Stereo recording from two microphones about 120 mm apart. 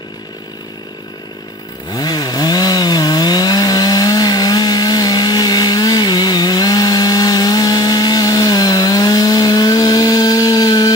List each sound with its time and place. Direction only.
1.9 s chainsaw: 35° left (ahead or behind)